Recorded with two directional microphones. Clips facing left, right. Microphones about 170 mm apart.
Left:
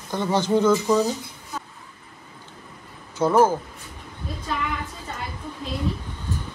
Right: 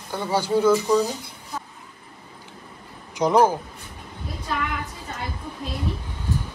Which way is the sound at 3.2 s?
15° right (ahead or behind).